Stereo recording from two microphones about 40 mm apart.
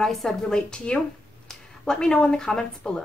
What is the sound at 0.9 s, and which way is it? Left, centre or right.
Speech, left.